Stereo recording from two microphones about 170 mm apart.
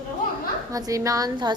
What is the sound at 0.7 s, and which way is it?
Speech, 20° right (ahead or behind).